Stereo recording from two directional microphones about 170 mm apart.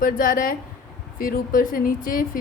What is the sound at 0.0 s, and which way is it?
A woman's voice, 55° left (ahead or behind).